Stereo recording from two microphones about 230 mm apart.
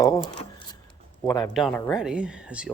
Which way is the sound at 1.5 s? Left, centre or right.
Centre.